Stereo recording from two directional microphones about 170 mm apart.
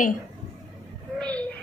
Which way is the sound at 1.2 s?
5° left (ahead or behind).